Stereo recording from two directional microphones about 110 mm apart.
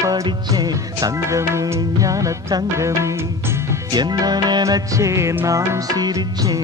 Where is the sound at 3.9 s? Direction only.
40° right (ahead or behind).